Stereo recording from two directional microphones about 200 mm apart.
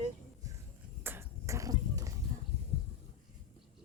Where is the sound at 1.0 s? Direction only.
10° right (ahead or behind).